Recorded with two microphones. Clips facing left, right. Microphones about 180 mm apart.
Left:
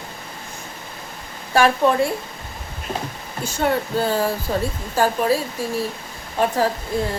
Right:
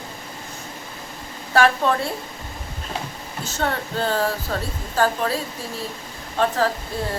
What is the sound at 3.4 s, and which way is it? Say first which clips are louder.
Speech: left 5 dB; 10° left (ahead or behind).